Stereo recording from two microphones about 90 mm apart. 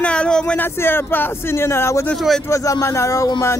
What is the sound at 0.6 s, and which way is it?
Speech, 25° left (ahead or behind).